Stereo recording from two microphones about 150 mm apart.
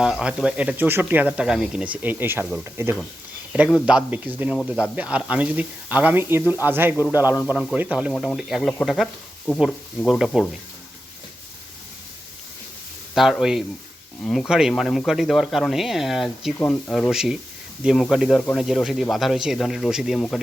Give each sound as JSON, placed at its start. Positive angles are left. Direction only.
{"t": 0.0, "sound": "speech", "side_deg": -5}
{"t": 7.5, "sound": "speech", "side_deg": 0}
{"t": 13.1, "sound": "speech", "side_deg": 0}
{"t": 17.1, "sound": "speech", "side_deg": -5}